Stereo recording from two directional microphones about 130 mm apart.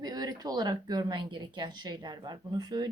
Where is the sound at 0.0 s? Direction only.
30° right (ahead or behind).